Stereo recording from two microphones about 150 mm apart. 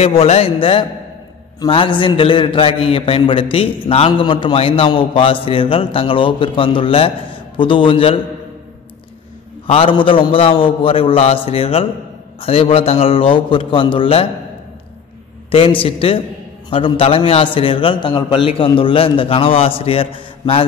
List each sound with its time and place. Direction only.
0.0 s a man's voice: 40° left (ahead or behind)
9.7 s a man's voice: 35° left (ahead or behind)
15.5 s a man's voice: 35° left (ahead or behind)